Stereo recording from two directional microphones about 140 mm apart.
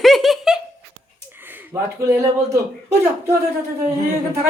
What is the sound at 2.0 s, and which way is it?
Speech, 25° right (ahead or behind).